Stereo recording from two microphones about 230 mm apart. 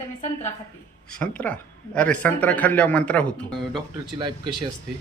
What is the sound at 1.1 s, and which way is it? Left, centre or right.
Speech, centre.